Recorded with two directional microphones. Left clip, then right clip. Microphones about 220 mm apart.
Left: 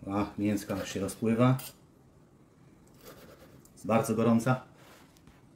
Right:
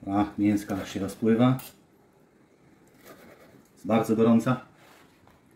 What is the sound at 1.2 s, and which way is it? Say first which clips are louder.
Speech: right 4 dB; 30° left (ahead or behind).